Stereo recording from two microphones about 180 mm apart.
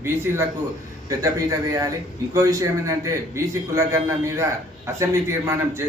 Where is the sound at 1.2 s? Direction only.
20° right (ahead or behind).